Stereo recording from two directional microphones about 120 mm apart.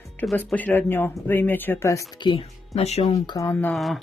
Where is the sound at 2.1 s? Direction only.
40° left (ahead or behind).